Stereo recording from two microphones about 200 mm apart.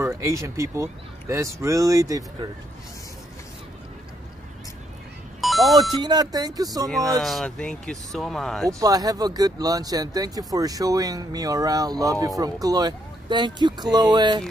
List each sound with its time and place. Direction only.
0.0 s speech: 15° right (ahead or behind)
5.4 s music: centre (ahead or behind)
5.8 s speech: 20° right (ahead or behind)
7.2 s speech: centre (ahead or behind)
8.6 s speech: 15° right (ahead or behind)